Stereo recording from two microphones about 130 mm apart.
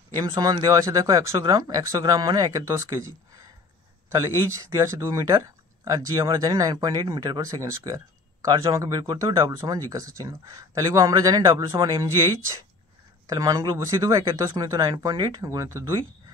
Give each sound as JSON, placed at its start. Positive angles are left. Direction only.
{"t": 0.2, "sound": "speech", "side_deg": -25}
{"t": 4.1, "sound": "speech", "side_deg": -25}
{"t": 13.3, "sound": "speech", "side_deg": -25}